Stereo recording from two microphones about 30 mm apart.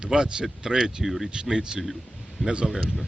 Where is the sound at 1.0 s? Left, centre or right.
Centre.